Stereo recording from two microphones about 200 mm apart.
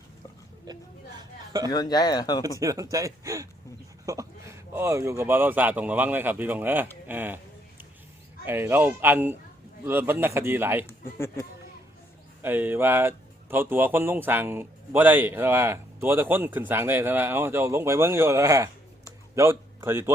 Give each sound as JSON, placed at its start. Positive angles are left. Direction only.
{"t": 1.7, "sound": "speech", "side_deg": 20}
{"t": 2.6, "sound": "speech", "side_deg": -15}
{"t": 8.4, "sound": "speech", "side_deg": -10}
{"t": 12.4, "sound": "speech", "side_deg": -10}